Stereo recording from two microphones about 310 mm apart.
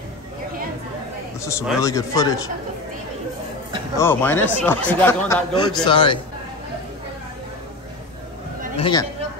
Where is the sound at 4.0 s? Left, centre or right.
Centre.